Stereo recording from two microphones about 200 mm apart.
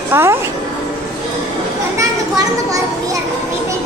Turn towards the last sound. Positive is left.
turn(degrees=-15)  # may be behind; listen again after turning